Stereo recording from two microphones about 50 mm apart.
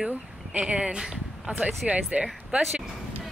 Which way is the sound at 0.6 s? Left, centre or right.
Centre.